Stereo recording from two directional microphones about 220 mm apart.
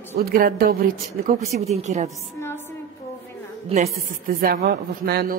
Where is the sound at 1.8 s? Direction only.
30° right (ahead or behind).